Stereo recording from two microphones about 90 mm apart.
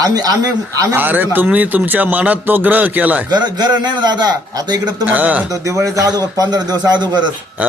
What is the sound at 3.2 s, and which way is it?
A man's voice, 50° right (ahead or behind).